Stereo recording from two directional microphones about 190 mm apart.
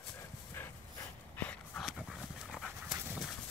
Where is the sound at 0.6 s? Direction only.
10° left (ahead or behind).